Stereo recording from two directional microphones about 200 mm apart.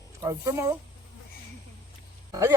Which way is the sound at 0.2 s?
15° right (ahead or behind).